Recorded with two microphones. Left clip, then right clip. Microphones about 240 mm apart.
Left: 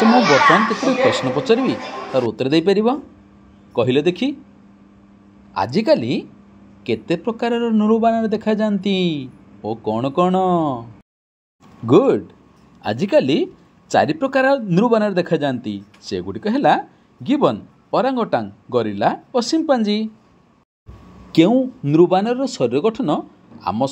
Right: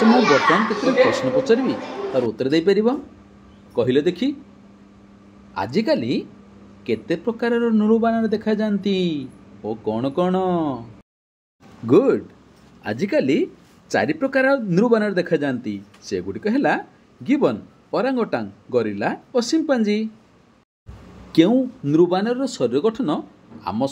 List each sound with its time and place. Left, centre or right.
1.1 s speech: centre
5.5 s speech: centre
11.8 s speech: centre
21.3 s speech: centre